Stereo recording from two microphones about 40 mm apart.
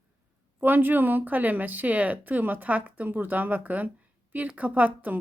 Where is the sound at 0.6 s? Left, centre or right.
Right.